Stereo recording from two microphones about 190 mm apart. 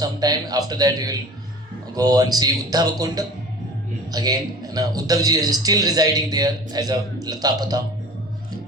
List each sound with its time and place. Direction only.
0.0 s a man's voice: 20° right (ahead or behind)